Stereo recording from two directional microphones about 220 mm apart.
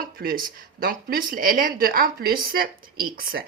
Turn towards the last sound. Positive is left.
turn(degrees=-40)  # may be behind; listen again after turning